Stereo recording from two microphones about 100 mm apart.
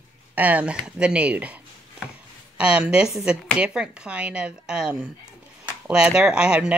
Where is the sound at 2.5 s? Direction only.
10° right (ahead or behind).